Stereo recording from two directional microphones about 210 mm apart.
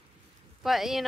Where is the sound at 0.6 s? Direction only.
Centre (ahead or behind).